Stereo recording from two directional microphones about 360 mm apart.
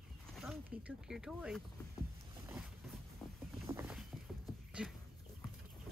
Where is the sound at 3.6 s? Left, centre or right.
Centre.